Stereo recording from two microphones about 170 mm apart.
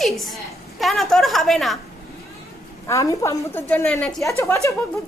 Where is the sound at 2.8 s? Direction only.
20° left (ahead or behind).